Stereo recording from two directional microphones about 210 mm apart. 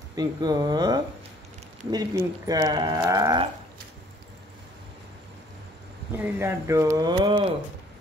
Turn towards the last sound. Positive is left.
turn(degrees=-25)  # may be behind; listen again after turning